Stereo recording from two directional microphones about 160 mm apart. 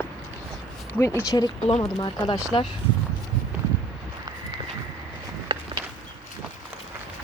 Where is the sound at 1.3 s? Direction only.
20° left (ahead or behind).